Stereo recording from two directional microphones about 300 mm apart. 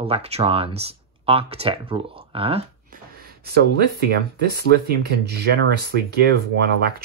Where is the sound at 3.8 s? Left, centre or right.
Right.